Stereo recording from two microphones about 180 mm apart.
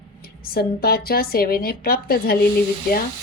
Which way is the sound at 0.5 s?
60° left (ahead or behind).